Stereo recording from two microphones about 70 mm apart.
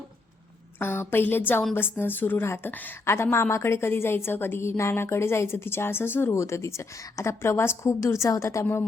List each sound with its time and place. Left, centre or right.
0.8 s a woman's voice: left
8.0 s a woman's voice: left
8.6 s a woman's voice: left